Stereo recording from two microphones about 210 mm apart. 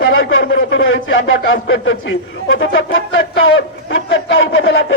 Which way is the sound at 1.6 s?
70° left (ahead or behind).